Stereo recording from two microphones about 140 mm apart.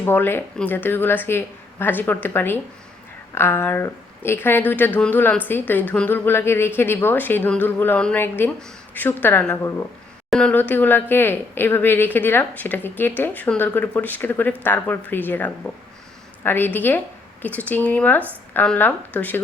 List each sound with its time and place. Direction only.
0.0 s a woman's voice: 15° left (ahead or behind)